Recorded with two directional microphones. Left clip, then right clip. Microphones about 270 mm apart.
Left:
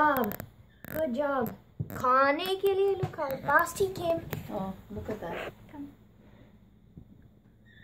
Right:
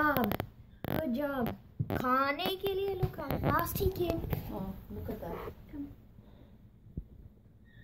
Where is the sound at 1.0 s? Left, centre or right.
Centre.